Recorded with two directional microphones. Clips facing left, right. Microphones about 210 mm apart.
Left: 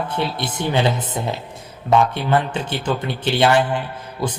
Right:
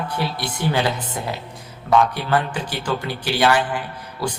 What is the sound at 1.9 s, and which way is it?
A man's voice, 25° left (ahead or behind).